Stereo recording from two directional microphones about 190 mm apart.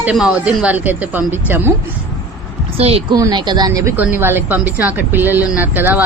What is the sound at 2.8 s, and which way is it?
Speech, 30° right (ahead or behind).